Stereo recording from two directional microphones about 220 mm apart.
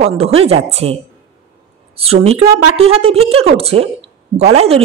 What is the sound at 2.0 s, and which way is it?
A woman's voice, 25° right (ahead or behind).